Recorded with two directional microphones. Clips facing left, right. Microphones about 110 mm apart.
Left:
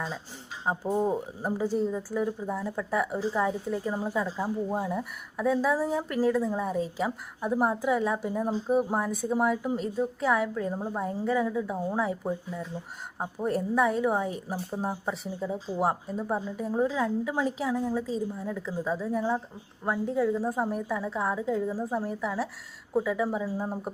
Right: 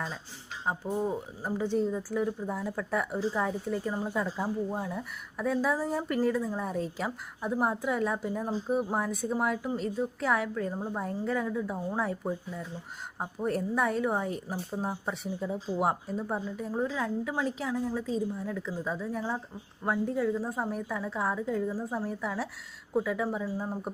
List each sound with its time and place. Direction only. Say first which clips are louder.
0.9 s speech: left 4 dB; 20° left (ahead or behind)
1.6 s a woman's voice: even; 5° left (ahead or behind)
10.5 s a woman's voice: left 2 dB; 10° left (ahead or behind)